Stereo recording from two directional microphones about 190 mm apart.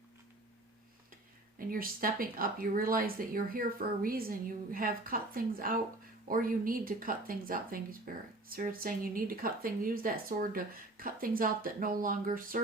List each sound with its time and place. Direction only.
1.5 s speech: 50° right (ahead or behind)